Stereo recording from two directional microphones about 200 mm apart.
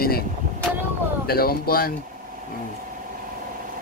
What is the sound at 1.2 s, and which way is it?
Speech, 50° left (ahead or behind).